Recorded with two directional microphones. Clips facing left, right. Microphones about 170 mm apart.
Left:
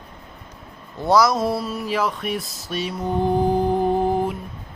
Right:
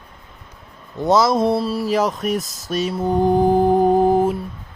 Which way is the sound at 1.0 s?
25° right (ahead or behind).